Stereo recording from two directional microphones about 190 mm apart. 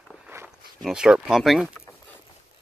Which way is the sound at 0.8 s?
5° right (ahead or behind).